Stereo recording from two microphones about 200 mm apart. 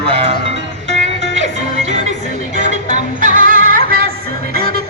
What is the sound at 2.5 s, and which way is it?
Music, 40° right (ahead or behind).